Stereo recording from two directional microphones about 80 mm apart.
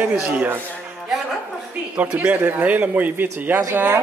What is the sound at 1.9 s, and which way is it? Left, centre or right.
A man's voice, centre.